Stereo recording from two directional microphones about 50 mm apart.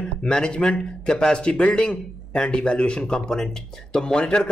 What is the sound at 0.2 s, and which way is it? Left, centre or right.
Speech, centre.